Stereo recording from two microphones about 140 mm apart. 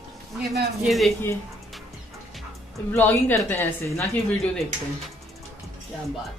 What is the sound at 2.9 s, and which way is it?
A woman's voice, 15° left (ahead or behind).